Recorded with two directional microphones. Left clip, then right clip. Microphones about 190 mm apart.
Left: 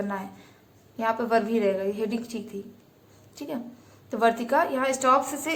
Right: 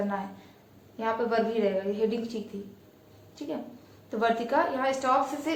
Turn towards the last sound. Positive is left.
turn(degrees=30)  # may be behind; listen again after turning